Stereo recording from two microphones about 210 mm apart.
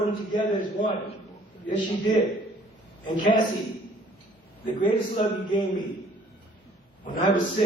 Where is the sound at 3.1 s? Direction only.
35° left (ahead or behind).